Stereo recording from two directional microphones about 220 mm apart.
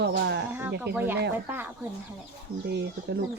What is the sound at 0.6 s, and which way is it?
Speech, 10° right (ahead or behind).